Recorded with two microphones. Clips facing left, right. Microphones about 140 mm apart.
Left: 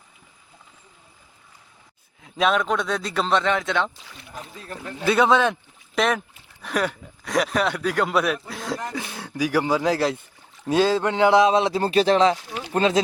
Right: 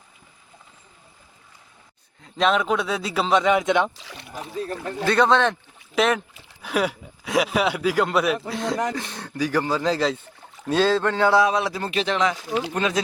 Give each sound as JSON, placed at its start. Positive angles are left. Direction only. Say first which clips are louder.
{"t": 2.2, "sound": "speech", "louder": "even", "side_deg": 0}
{"t": 3.9, "sound": "speech", "louder": "right 4 dB", "side_deg": -85}
{"t": 4.5, "sound": "speech", "louder": "right 12 dB", "side_deg": -35}
{"t": 5.0, "sound": "a man's voice", "louder": "even", "side_deg": 5}